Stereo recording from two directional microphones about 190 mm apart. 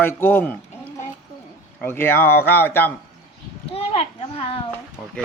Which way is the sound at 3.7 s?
30° left (ahead or behind).